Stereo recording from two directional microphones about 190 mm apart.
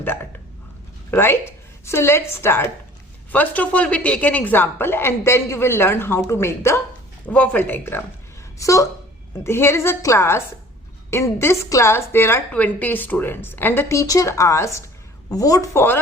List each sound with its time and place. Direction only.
0.0 s hiccup: 10° left (ahead or behind)
1.1 s a woman's voice: 10° left (ahead or behind)